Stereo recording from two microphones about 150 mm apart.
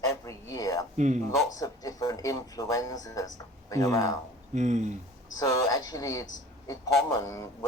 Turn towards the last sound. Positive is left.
turn(degrees=20)  # may be behind; listen again after turning